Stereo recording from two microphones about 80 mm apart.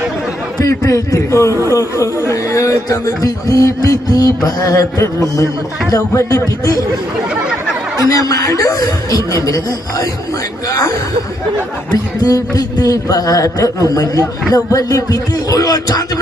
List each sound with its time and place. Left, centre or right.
0.6 s a man's voice: left
2.3 s music: left
4.4 s a man's voice: left
8.1 s a man's voice: left
10.7 s a man's voice: left
12.2 s a man's voice: left